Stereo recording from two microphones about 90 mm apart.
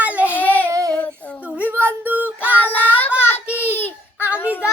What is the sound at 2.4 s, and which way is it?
Child singing, 20° left (ahead or behind).